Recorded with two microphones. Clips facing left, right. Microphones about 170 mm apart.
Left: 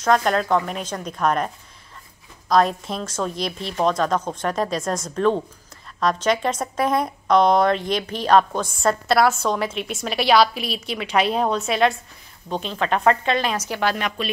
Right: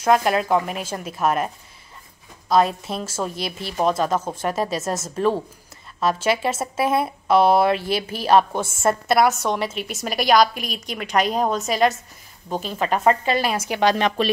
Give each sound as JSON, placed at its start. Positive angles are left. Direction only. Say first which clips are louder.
{"t": 0.0, "sound": "a woman's voice", "louder": "right 1 dB", "side_deg": -10}
{"t": 2.5, "sound": "a woman's voice", "louder": "even", "side_deg": -5}
{"t": 10.5, "sound": "a woman's voice", "louder": "left 3 dB", "side_deg": -45}
{"t": 11.0, "sound": "a woman's voice", "louder": "even", "side_deg": 0}
{"t": 13.7, "sound": "a woman's voice", "louder": "right 7 dB", "side_deg": -25}